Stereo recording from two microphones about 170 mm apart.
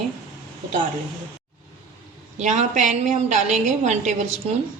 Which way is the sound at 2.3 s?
45° right (ahead or behind).